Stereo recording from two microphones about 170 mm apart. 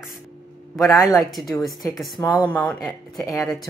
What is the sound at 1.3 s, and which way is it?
Speech, centre (ahead or behind).